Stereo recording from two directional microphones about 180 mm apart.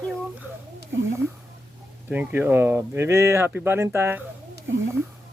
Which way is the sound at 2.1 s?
10° right (ahead or behind).